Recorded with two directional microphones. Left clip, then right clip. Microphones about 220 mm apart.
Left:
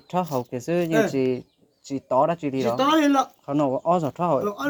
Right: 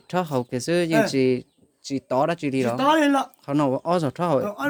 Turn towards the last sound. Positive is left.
turn(degrees=-40)  # may be behind; listen again after turning